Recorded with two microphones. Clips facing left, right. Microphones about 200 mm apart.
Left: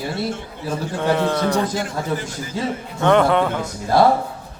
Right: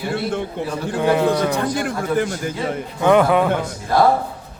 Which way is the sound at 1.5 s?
55° right (ahead or behind).